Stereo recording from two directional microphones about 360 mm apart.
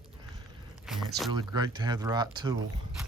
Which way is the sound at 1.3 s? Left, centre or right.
Centre.